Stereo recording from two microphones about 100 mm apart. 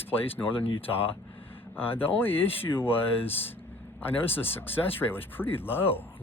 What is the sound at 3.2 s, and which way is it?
Speech, 75° left (ahead or behind).